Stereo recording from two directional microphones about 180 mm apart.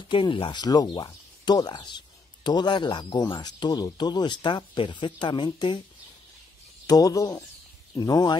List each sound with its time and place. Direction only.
0.1 s speech: 30° left (ahead or behind)
6.9 s speech: 20° left (ahead or behind)